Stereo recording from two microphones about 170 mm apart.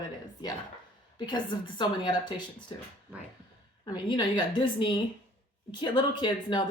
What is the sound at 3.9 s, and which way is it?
A woman's voice, 25° left (ahead or behind).